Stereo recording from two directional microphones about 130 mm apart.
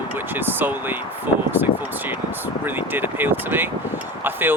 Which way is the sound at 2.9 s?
15° right (ahead or behind).